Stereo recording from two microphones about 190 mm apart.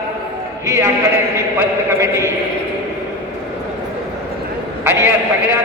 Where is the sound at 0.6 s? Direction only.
15° right (ahead or behind).